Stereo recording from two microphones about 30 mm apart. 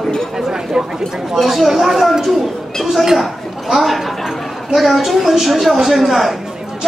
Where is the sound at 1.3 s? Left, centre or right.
Centre.